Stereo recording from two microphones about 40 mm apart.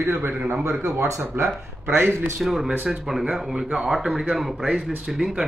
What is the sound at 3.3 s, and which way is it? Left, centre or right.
Speech, centre.